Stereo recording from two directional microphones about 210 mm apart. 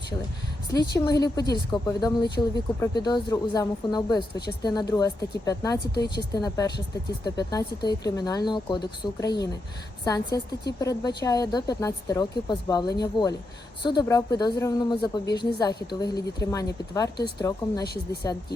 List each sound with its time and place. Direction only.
0.7 s speech: 20° left (ahead or behind)
5.9 s speech: 50° left (ahead or behind)
6.3 s speech: 20° left (ahead or behind)
17.8 s speech: 50° left (ahead or behind)